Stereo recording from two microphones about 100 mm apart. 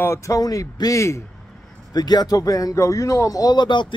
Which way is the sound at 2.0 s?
45° left (ahead or behind).